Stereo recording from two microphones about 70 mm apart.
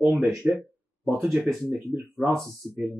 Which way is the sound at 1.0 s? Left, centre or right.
Right.